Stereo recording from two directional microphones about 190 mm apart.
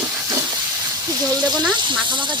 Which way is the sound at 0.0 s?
15° right (ahead or behind).